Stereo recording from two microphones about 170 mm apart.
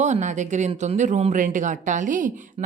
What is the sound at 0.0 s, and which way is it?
A woman's voice, 45° right (ahead or behind).